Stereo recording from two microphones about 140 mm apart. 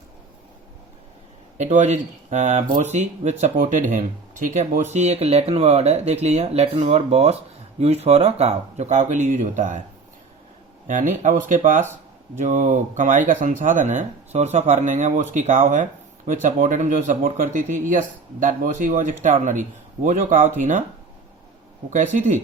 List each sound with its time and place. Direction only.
1.5 s speech: 55° right (ahead or behind)
10.8 s speech: 65° right (ahead or behind)
21.8 s speech: 65° right (ahead or behind)